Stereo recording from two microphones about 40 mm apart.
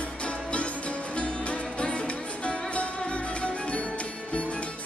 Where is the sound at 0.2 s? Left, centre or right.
Left.